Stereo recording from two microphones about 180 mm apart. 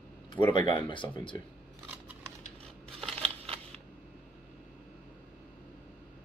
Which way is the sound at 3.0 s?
35° right (ahead or behind).